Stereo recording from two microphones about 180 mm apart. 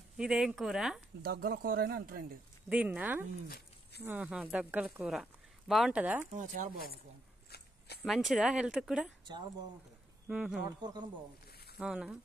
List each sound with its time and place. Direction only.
0.2 s speech: 5° right (ahead or behind)
1.2 s speech: 55° right (ahead or behind)
2.7 s speech: 10° right (ahead or behind)
3.4 s a sound: 60° left (ahead or behind)
4.0 s speech: 10° right (ahead or behind)
6.3 s speech: 45° right (ahead or behind)
8.0 s speech: centre (ahead or behind)
10.2 s speech: 5° right (ahead or behind)
10.8 s speech: 25° right (ahead or behind)
11.8 s speech: 5° right (ahead or behind)